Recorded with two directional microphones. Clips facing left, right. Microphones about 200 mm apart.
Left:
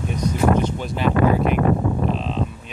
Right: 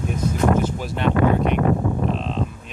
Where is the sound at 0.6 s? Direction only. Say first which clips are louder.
Left 1 dB; 5° right (ahead or behind).